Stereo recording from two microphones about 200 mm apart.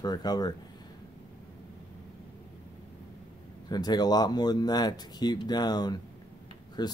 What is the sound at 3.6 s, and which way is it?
Speech, 20° left (ahead or behind).